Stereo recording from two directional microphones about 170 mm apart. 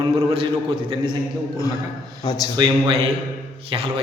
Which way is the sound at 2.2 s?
25° left (ahead or behind).